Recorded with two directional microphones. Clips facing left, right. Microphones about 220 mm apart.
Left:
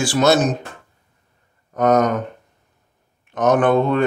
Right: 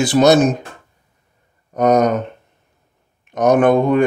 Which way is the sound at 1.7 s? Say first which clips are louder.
Right 2 dB; 15° right (ahead or behind).